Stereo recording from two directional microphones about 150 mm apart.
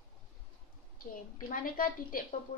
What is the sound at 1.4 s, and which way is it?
Speech, 70° left (ahead or behind).